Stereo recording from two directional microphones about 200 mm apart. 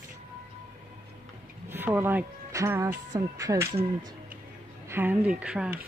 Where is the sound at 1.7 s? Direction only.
10° right (ahead or behind).